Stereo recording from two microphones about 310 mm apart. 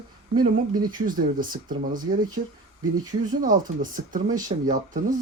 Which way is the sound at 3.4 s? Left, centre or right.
Right.